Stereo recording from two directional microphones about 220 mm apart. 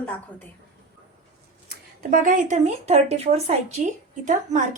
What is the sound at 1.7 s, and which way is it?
Speech, 40° right (ahead or behind).